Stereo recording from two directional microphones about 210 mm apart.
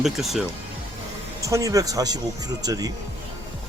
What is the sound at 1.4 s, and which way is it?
A man's voice, 15° right (ahead or behind).